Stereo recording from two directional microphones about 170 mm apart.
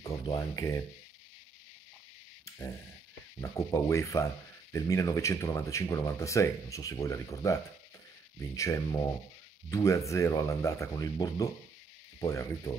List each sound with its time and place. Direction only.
0.0 s speech: 20° left (ahead or behind)
3.3 s speech: 15° left (ahead or behind)
8.5 s speech: 20° left (ahead or behind)